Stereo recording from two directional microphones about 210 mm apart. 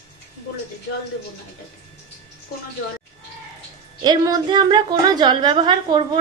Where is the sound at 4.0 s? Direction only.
20° right (ahead or behind).